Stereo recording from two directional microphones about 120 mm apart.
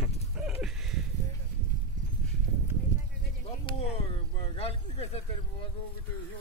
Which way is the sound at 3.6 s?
50° left (ahead or behind).